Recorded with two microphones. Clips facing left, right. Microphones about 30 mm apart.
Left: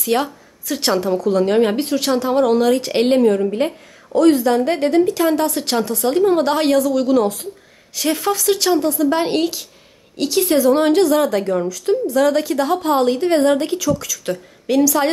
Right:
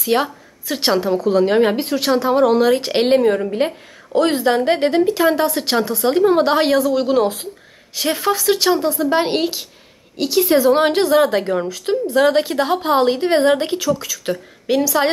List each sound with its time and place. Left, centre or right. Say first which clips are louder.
0.0 s a woman's voice: right 1 dB; centre
2.8 s a woman's voice: even; right
4.1 s a woman's voice: left 2 dB; right
5.0 s a woman's voice: right 1 dB; centre
10.6 s a woman's voice: left 1 dB; right